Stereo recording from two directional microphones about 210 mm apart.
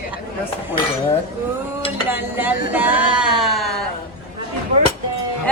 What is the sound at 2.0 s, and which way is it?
Speech, 10° right (ahead or behind).